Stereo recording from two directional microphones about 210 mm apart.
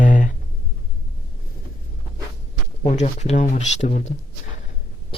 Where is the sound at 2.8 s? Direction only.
35° left (ahead or behind).